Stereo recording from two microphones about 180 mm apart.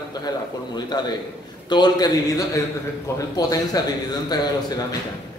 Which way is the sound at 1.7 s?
25° left (ahead or behind).